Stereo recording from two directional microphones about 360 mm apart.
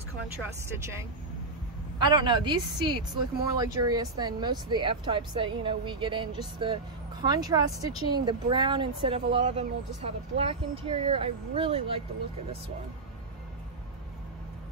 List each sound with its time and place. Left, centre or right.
2.0 s speech: centre